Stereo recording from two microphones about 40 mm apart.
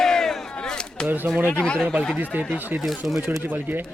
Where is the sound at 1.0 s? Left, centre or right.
Right.